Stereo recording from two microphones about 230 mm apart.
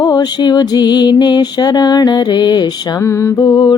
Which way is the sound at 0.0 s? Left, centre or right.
Centre.